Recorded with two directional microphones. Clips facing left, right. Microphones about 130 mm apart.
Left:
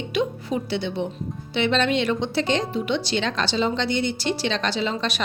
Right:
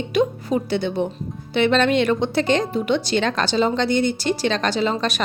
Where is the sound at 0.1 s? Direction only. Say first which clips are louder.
Right 5 dB; 45° right (ahead or behind).